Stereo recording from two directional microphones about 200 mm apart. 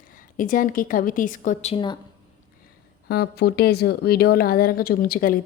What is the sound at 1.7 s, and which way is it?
Speech, 25° left (ahead or behind).